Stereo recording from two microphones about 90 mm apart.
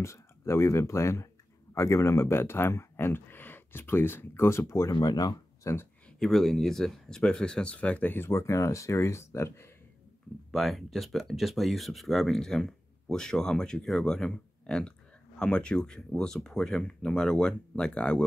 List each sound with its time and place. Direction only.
0.0 s speech: 30° left (ahead or behind)
4.9 s speech: 50° left (ahead or behind)
5.6 s speech: 30° left (ahead or behind)
6.1 s speech: 5° left (ahead or behind); by 9.7 s 30° left (ahead or behind)
10.5 s speech: centre (ahead or behind)